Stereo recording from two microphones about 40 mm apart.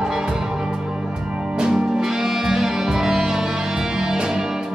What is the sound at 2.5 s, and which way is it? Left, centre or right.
Music, centre.